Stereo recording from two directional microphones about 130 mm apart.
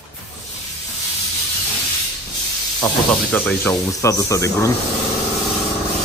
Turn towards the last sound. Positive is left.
turn(degrees=25)  # may be behind; listen again after turning